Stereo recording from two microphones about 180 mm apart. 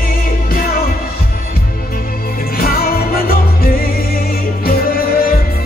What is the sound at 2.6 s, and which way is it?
Music, 55° left (ahead or behind).